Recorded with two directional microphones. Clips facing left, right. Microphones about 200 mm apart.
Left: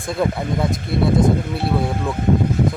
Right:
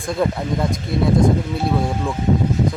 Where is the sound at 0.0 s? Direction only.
Centre (ahead or behind).